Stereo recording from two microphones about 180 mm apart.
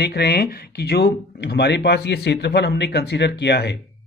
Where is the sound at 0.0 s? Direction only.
65° left (ahead or behind).